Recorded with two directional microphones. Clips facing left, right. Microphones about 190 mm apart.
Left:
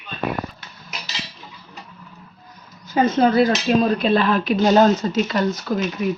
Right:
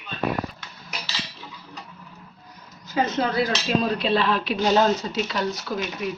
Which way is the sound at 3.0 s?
55° left (ahead or behind).